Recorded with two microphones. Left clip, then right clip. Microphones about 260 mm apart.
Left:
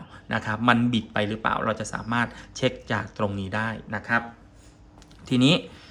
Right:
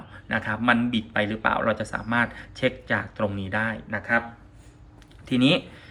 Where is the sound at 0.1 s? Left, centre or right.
Centre.